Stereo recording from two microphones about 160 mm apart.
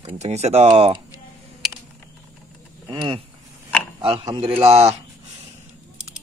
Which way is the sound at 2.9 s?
30° right (ahead or behind).